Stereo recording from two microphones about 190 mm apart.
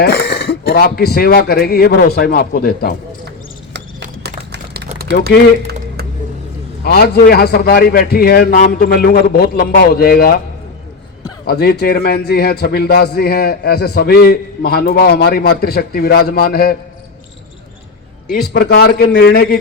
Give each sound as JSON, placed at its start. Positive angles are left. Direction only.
{"t": 0.0, "sound": "speech", "side_deg": 60}
{"t": 4.2, "sound": "a sound", "side_deg": -60}
{"t": 6.8, "sound": "a man's voice", "side_deg": 55}
{"t": 11.4, "sound": "a man's voice", "side_deg": 55}
{"t": 18.5, "sound": "a man's voice", "side_deg": 55}